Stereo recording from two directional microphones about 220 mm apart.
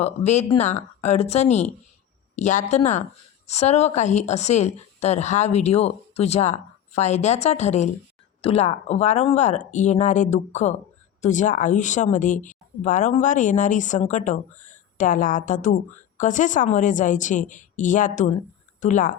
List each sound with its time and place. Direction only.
0.0 s a woman's voice: 30° left (ahead or behind)